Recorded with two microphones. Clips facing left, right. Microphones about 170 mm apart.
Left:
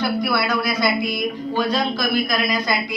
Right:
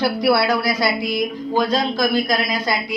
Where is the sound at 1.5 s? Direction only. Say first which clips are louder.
Right 2 dB; 45° right (ahead or behind).